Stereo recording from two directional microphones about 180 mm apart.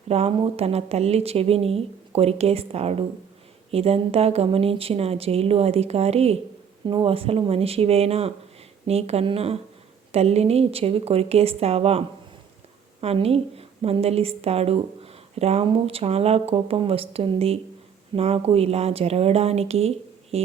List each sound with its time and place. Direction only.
0.1 s a woman's voice: 35° right (ahead or behind)